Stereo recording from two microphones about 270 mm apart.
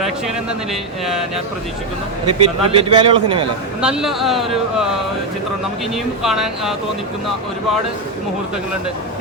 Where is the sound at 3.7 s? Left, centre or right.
Centre.